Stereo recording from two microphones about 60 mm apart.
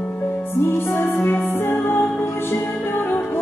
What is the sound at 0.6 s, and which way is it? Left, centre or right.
Music, left.